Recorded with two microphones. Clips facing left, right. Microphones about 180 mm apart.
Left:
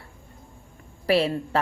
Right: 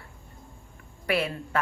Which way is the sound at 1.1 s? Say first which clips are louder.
Left 6 dB; 30° left (ahead or behind).